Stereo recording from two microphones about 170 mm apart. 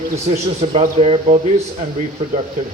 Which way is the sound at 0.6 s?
40° right (ahead or behind).